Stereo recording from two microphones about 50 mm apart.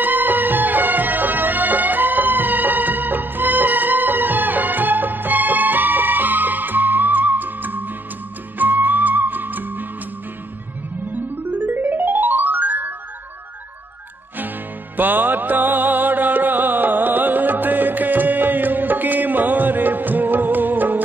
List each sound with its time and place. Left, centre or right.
0.0 s music: right
11.5 s music: right
15.0 s music: right